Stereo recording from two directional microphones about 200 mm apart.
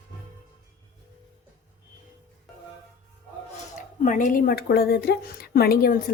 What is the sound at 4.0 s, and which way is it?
Speech, 40° left (ahead or behind).